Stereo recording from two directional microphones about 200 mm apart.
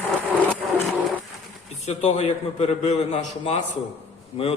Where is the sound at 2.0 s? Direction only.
35° left (ahead or behind).